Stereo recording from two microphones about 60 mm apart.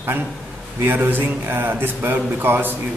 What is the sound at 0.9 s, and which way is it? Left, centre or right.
Speech, right.